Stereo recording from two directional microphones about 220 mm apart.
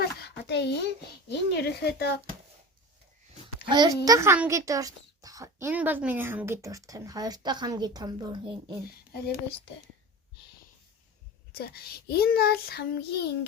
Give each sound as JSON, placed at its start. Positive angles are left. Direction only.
{"t": 0.0, "sound": "a sound", "side_deg": 50}
{"t": 1.3, "sound": "child singing", "side_deg": 45}
{"t": 3.7, "sound": "a child's voice", "side_deg": -20}
{"t": 11.5, "sound": "child singing", "side_deg": 45}